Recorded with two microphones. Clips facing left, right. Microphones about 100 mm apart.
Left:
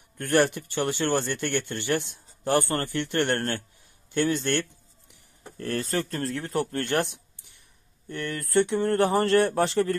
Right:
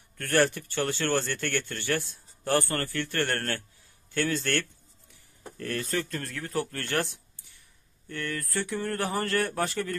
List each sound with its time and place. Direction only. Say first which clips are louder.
0.2 s speech: left 2 dB; 20° left (ahead or behind)
4.1 s a sound: left 3 dB; 20° left (ahead or behind)
5.6 s speech: left 3 dB; 30° left (ahead or behind)